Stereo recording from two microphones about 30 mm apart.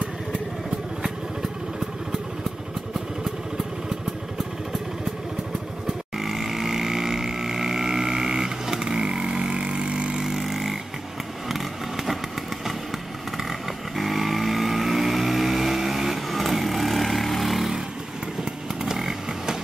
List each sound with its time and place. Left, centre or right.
1.0 s motorcycle: centre
5.9 s vehicle: centre; by 10.1 s right
10.1 s vehicle: centre
13.4 s vehicle: centre
18.4 s chainsaw: right